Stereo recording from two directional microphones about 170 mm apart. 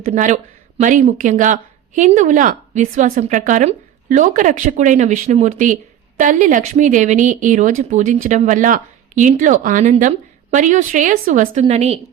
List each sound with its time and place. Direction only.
0.0 s a woman's voice: 45° right (ahead or behind)